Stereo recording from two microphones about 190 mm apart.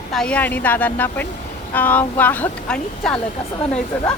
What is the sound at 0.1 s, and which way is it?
Speech, 5° left (ahead or behind).